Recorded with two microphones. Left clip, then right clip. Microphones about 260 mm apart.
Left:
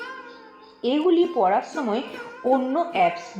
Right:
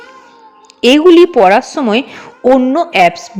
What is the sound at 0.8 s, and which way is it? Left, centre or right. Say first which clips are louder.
A woman's voice: right 15 dB; right.